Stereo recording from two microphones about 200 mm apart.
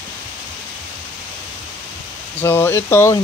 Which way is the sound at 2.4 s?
10° left (ahead or behind).